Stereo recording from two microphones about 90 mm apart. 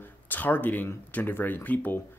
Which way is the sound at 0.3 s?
20° left (ahead or behind).